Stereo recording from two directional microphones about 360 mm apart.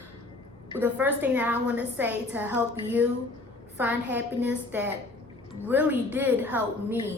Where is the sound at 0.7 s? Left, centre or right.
Centre.